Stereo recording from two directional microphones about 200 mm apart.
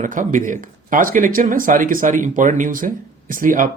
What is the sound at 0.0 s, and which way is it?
Speech, 40° right (ahead or behind).